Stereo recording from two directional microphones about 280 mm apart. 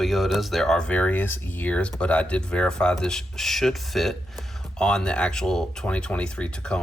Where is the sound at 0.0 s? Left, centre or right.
Centre.